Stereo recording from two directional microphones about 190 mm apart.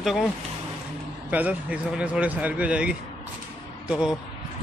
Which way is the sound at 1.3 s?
10° right (ahead or behind).